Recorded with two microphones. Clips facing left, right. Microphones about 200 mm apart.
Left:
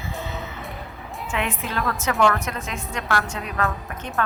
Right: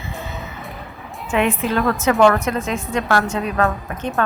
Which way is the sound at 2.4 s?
25° right (ahead or behind).